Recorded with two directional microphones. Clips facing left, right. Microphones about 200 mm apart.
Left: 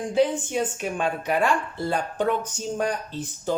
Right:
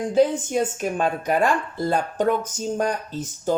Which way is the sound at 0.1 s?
45° right (ahead or behind).